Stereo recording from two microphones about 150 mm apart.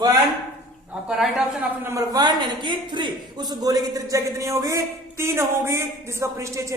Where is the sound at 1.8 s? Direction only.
20° right (ahead or behind).